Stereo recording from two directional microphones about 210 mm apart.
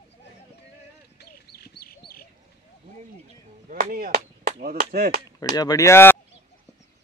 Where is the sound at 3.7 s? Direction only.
40° right (ahead or behind).